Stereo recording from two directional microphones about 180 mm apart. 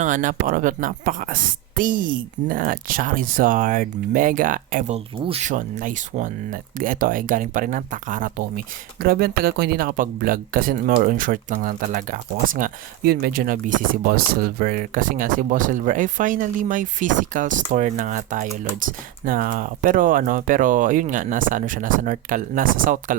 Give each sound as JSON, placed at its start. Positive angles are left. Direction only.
{"t": 0.0, "sound": "speech", "side_deg": -45}